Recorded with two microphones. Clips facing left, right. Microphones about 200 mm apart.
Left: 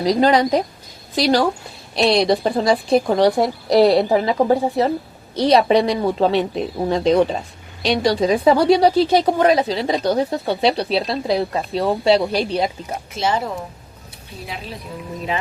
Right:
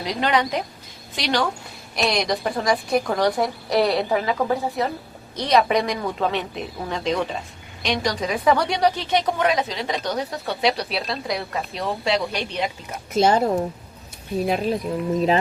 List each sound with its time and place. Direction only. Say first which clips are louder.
0.0 s a woman's voice: left 7 dB; 35° left (ahead or behind)
13.1 s speech: right 4 dB; 45° right (ahead or behind)
14.4 s speech: right 10 dB; 55° right (ahead or behind)